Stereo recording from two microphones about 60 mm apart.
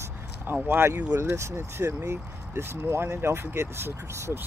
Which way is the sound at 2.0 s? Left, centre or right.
Right.